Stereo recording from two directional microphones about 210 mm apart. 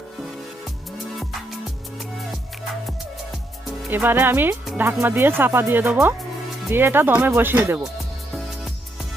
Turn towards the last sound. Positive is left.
turn(degrees=-10)  # may be behind; listen again after turning